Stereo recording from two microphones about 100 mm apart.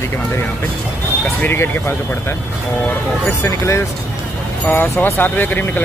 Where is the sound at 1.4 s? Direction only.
25° left (ahead or behind).